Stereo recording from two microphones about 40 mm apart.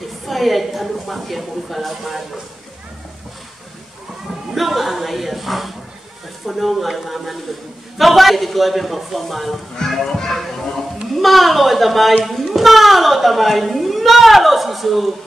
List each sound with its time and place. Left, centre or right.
0.3 s speech: centre
4.6 s a child's voice: centre